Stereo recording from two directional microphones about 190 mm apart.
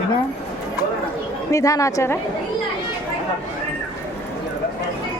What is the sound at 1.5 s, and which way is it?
Speech, 15° left (ahead or behind).